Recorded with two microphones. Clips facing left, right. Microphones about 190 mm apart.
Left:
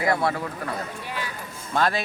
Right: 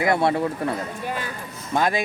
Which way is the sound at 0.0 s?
25° right (ahead or behind).